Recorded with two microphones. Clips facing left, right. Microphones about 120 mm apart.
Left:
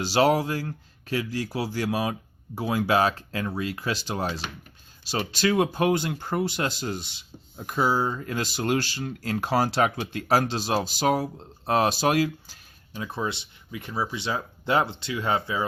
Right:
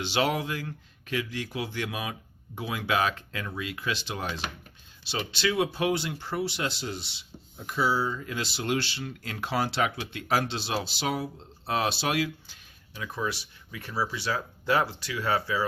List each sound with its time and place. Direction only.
0.0 s speech: 40° left (ahead or behind)
12.9 s speech: 30° left (ahead or behind)